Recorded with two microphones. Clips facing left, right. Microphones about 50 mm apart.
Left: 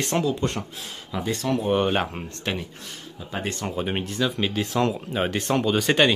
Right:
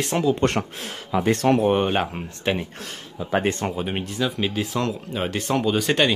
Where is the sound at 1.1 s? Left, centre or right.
Right.